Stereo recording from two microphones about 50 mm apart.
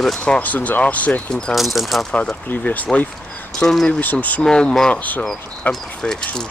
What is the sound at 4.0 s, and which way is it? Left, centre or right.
Speech, left.